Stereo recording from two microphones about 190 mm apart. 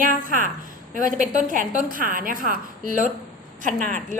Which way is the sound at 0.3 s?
45° right (ahead or behind).